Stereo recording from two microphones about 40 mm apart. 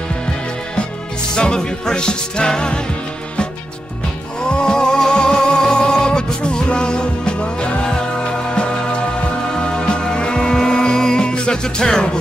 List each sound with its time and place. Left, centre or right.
1.3 s music: left
4.4 s music: centre